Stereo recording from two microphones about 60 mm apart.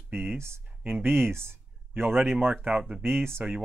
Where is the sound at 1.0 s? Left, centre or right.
Right.